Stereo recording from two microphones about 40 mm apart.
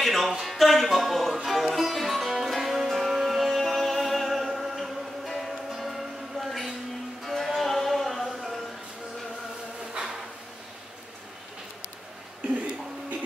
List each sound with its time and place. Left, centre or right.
0.0 s music: centre
10.0 s drawer open or close: right